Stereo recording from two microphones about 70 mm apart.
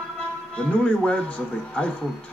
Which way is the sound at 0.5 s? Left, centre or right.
Centre.